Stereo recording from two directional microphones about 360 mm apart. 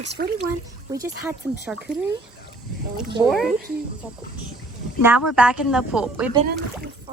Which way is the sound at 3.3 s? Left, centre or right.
Centre.